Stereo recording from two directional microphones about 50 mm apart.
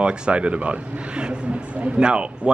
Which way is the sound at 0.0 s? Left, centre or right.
Centre.